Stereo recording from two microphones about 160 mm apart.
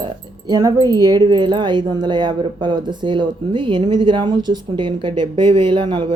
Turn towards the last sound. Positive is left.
turn(degrees=-30)  # may be behind; listen again after turning